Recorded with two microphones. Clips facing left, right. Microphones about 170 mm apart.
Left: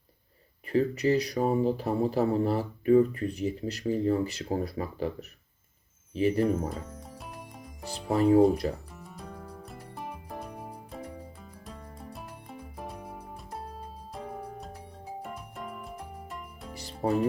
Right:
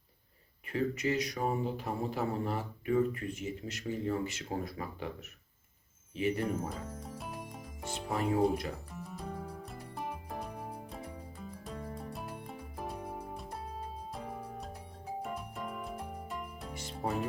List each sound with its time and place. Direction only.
0.7 s speech: 35° left (ahead or behind)
6.1 s speech: 35° left (ahead or behind)
6.4 s music: centre (ahead or behind)
7.9 s speech: 35° left (ahead or behind)
8.9 s music: centre (ahead or behind)
16.7 s music: 35° left (ahead or behind)